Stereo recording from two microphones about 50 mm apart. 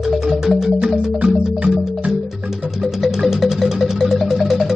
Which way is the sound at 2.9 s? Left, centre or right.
Centre.